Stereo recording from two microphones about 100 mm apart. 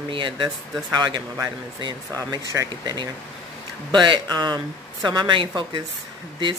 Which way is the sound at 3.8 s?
50° right (ahead or behind).